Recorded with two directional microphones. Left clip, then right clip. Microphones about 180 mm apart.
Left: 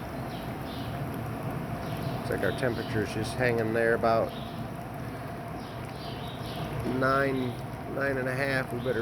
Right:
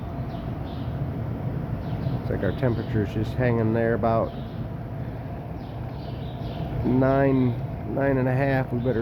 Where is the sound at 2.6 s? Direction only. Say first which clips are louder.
Right 3 dB; 15° right (ahead or behind).